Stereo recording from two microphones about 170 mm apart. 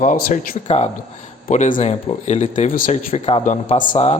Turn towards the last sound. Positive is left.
turn(degrees=50)  # may be behind; listen again after turning